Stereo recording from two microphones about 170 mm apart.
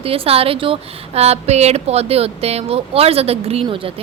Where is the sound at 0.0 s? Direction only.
35° right (ahead or behind).